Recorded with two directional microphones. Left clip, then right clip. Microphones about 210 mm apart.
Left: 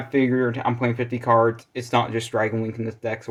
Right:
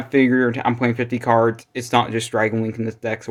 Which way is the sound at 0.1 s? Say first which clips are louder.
Right 4 dB; 30° right (ahead or behind).